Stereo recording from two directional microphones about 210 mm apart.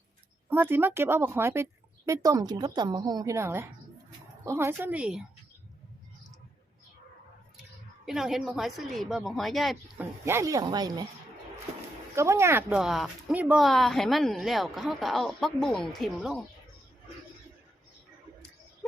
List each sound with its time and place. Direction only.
0.5 s a woman's voice: 10° right (ahead or behind)
8.0 s speech: centre (ahead or behind)
10.2 s a woman's voice: 15° right (ahead or behind)
12.1 s speech: 15° right (ahead or behind)